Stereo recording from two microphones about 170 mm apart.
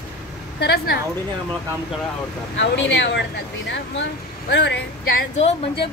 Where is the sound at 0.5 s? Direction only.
75° left (ahead or behind).